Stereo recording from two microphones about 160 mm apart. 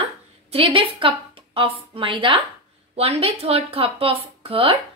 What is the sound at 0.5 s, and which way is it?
A woman's voice, 35° right (ahead or behind).